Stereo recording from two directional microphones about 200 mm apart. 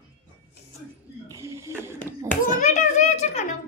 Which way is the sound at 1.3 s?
15° right (ahead or behind).